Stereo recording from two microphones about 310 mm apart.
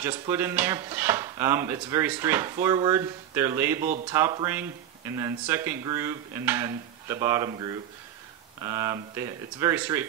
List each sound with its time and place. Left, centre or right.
0.0 s speech: centre